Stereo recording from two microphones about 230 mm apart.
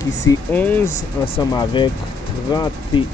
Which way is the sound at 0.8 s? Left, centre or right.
Left.